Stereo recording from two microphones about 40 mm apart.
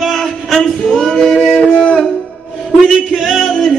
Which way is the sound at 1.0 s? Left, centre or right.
Centre.